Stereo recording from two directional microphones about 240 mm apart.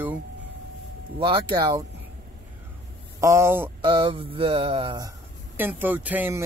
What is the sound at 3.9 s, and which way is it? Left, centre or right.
Speech, right.